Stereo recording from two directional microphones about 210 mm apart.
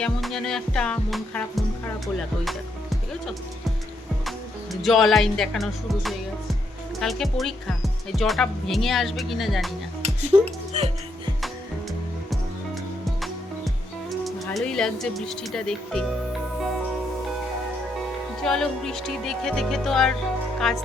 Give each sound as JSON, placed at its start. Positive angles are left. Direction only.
{"t": 0.0, "sound": "speech", "side_deg": 0}
{"t": 10.2, "sound": "speech", "side_deg": -30}
{"t": 14.1, "sound": "speech", "side_deg": 0}
{"t": 18.4, "sound": "speech", "side_deg": 0}